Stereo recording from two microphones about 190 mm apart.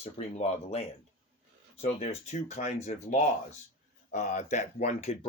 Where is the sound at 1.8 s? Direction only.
35° left (ahead or behind).